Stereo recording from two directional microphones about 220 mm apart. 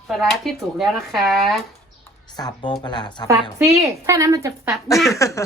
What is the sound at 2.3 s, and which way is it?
A woman's voice, 20° left (ahead or behind).